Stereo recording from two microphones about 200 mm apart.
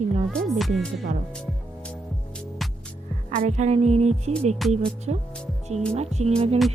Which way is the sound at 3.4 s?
35° right (ahead or behind).